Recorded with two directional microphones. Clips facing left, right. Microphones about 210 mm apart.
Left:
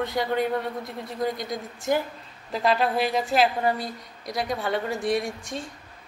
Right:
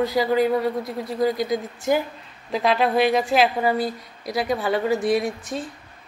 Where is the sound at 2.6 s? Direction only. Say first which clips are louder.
Right 2 dB; 90° right.